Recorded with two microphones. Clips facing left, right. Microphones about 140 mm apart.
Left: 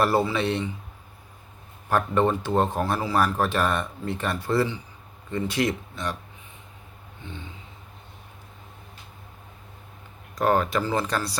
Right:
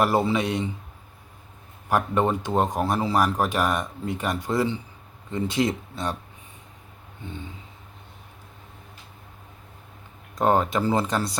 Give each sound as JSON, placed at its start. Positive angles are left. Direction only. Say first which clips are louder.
{"t": 0.0, "sound": "speech", "louder": "right 1 dB", "side_deg": -15}
{"t": 1.9, "sound": "speech", "louder": "even", "side_deg": -15}
{"t": 10.3, "sound": "speech", "louder": "right 1 dB", "side_deg": -20}